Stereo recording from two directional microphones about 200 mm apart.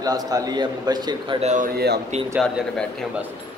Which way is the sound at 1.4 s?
40° right (ahead or behind).